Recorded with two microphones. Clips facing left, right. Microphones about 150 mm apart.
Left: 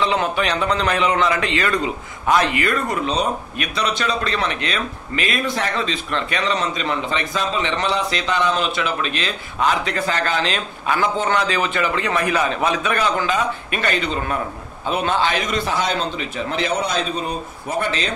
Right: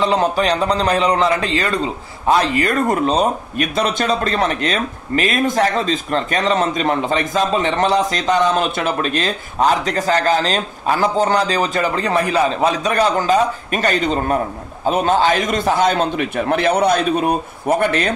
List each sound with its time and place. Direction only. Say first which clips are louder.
0.0 s a man's voice: right 4 dB; 35° right (ahead or behind); by 18.1 s 55° right (ahead or behind)